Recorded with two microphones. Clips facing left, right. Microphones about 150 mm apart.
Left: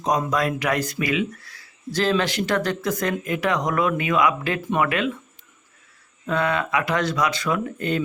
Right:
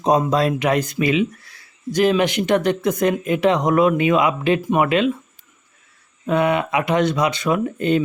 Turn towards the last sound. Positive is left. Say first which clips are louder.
# right 5 dB
turn(degrees=-20)  # may be behind; listen again after turning